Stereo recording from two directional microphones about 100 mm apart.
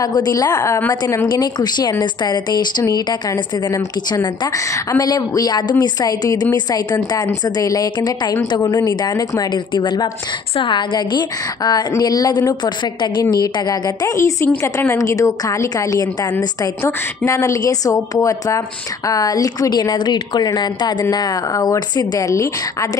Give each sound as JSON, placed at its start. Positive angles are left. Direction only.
{"t": 0.0, "sound": "a woman's voice", "side_deg": 40}
{"t": 0.7, "sound": "a woman's voice", "side_deg": 20}
{"t": 1.3, "sound": "a woman's voice", "side_deg": 45}
{"t": 4.6, "sound": "a woman's voice", "side_deg": 30}
{"t": 15.0, "sound": "a woman's voice", "side_deg": 35}